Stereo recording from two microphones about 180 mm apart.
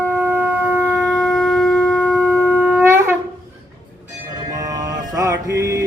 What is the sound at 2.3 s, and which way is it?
Shofar, 10° right (ahead or behind).